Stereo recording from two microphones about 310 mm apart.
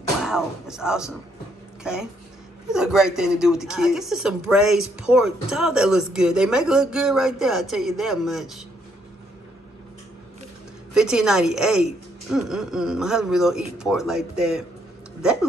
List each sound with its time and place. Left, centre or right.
0.2 s speech: centre
11.0 s speech: centre